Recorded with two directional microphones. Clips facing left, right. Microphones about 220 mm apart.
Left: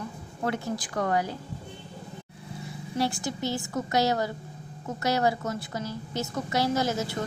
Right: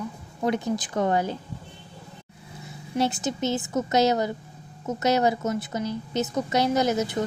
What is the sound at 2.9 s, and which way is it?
A woman's voice, 20° right (ahead or behind).